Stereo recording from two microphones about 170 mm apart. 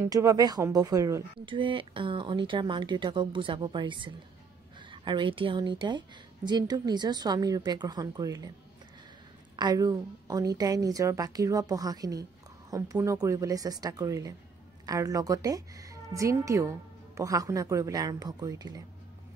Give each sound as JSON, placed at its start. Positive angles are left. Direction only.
{"t": 0.1, "sound": "a woman's voice", "side_deg": -20}
{"t": 9.6, "sound": "a woman's voice", "side_deg": -25}